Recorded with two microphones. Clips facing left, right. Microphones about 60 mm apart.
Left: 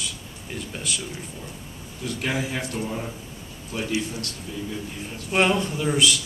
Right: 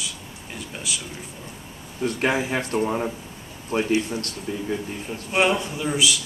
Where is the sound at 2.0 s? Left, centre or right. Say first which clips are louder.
Right 5 dB; right.